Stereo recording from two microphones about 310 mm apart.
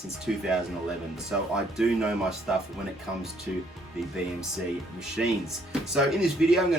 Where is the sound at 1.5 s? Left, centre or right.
Centre.